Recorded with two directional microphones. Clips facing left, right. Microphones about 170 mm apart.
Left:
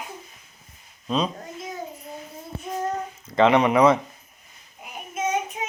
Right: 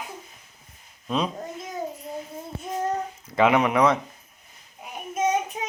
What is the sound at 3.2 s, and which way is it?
Speech, 5° right (ahead or behind).